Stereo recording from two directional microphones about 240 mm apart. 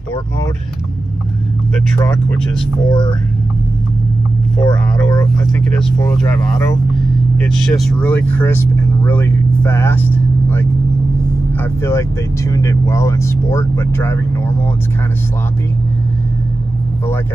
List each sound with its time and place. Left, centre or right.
2.0 s speech: centre
2.9 s speech: centre
4.6 s speech: centre
7.4 s speech: centre